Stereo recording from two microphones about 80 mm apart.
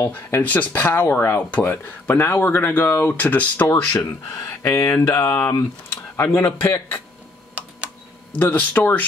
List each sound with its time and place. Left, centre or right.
0.1 s speech: left
8.3 s speech: left